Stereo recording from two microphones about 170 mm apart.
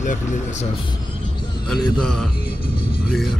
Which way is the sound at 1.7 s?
5° left (ahead or behind).